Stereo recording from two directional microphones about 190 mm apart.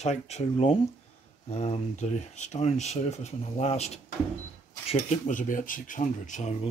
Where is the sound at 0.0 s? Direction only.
35° left (ahead or behind).